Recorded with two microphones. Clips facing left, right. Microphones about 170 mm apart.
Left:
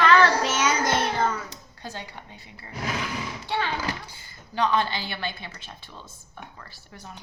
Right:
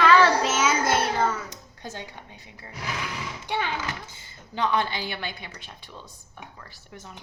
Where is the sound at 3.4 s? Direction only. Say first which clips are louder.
Even; 15° right (ahead or behind).